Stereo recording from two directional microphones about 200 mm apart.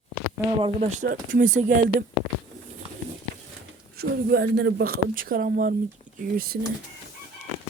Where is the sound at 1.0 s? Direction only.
45° right (ahead or behind).